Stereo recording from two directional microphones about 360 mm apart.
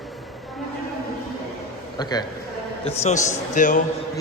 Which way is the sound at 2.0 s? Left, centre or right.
Centre.